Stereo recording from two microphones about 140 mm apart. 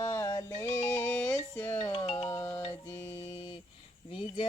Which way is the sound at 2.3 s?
15° left (ahead or behind).